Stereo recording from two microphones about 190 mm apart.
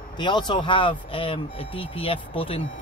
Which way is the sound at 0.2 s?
25° left (ahead or behind).